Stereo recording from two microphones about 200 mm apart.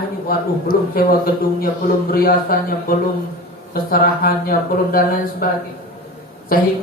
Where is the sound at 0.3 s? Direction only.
50° left (ahead or behind).